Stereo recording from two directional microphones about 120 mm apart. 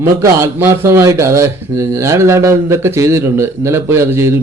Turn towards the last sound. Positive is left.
turn(degrees=-20)  # may be behind; listen again after turning